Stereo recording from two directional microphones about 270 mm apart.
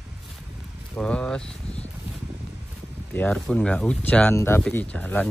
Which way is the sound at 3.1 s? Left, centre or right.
Centre.